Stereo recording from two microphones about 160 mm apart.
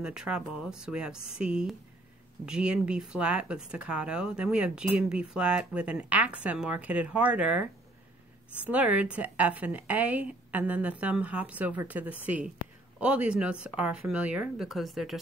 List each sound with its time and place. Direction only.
0.0 s a woman's voice: 5° right (ahead or behind)